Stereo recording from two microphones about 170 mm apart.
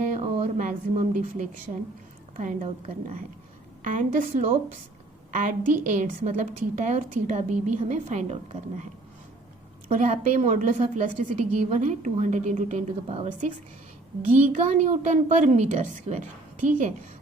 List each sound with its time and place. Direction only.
0.1 s a woman's voice: 50° right (ahead or behind)
10.0 s a woman's voice: 40° right (ahead or behind)
14.3 s a woman's voice: 45° right (ahead or behind)